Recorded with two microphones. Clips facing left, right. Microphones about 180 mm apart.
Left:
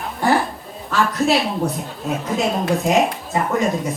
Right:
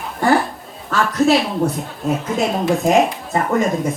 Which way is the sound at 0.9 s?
Centre (ahead or behind).